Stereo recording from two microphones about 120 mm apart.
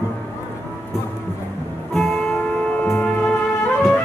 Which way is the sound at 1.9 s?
Centre (ahead or behind).